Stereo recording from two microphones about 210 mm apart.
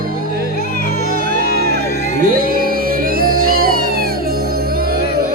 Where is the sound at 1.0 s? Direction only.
45° right (ahead or behind).